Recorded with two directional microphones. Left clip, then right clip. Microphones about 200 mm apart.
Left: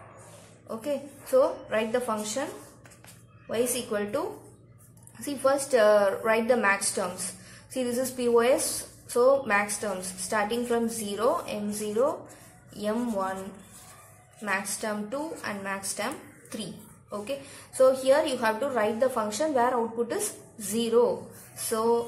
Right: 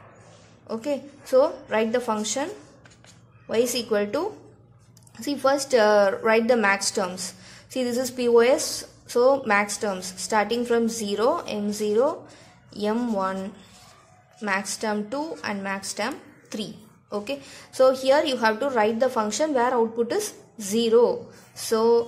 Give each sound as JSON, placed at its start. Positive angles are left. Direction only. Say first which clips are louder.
{"t": 0.7, "sound": "a woman's voice", "louder": "right 3 dB", "side_deg": -40}
{"t": 5.2, "sound": "a woman's voice", "louder": "right 3 dB", "side_deg": -40}
{"t": 14.4, "sound": "a woman's voice", "louder": "right 4 dB", "side_deg": -40}